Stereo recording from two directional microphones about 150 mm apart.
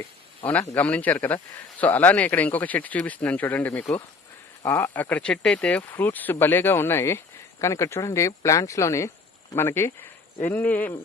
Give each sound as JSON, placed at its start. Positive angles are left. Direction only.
{"t": 0.8, "sound": "speech", "side_deg": 10}